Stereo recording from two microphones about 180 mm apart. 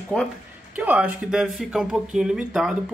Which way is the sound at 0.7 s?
10° right (ahead or behind).